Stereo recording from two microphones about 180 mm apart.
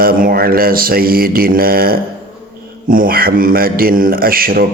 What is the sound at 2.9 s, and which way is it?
A man's voice, 50° right (ahead or behind).